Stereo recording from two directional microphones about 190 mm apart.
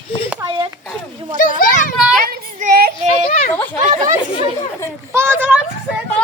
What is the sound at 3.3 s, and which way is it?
Children playing, 40° left (ahead or behind).